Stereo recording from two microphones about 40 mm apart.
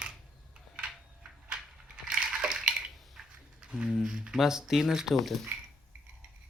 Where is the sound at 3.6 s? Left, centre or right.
Right.